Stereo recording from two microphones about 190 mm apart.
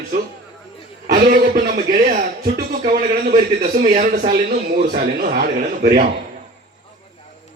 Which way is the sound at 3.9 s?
45° right (ahead or behind).